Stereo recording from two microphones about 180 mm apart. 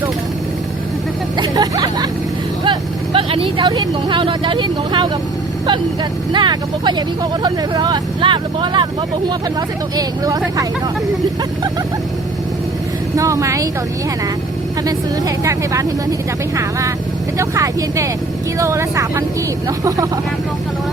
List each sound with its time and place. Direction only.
1.4 s speech: 20° right (ahead or behind)
6.3 s speech: 25° right (ahead or behind)
13.1 s speech: 15° right (ahead or behind)
15.4 s speech: 15° right (ahead or behind)
17.3 s speech: 15° right (ahead or behind)